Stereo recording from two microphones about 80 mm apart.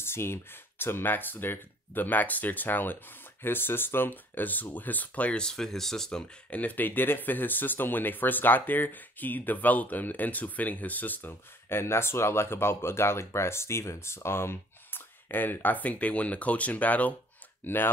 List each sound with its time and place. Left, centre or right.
0.0 s speech: left; by 6.2 s centre
6.5 s speech: centre